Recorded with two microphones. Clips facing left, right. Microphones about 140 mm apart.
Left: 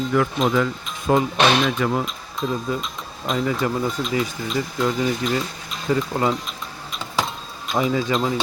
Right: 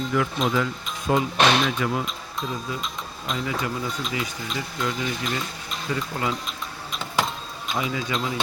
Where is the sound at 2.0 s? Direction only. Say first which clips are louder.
Left 5 dB; centre (ahead or behind).